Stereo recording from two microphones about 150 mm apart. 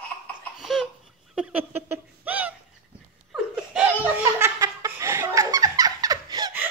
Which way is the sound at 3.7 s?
10° right (ahead or behind).